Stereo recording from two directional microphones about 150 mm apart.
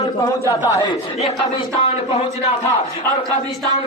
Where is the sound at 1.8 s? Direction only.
45° left (ahead or behind).